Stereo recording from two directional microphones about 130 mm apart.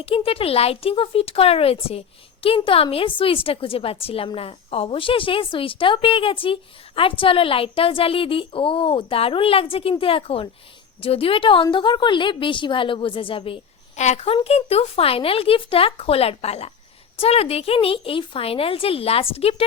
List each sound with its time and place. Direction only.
0.0 s a woman's voice: 45° left (ahead or behind)
13.9 s a woman's voice: 60° left (ahead or behind)